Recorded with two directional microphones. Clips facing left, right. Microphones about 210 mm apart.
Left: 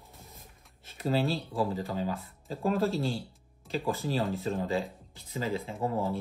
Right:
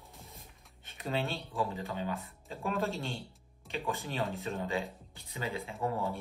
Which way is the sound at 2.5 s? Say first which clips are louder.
Left 6 dB; 35° left (ahead or behind).